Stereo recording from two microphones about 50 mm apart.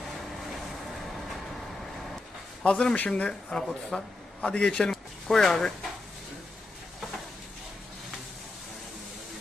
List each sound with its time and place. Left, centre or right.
2.6 s speech: left
3.9 s speech: centre
4.4 s speech: centre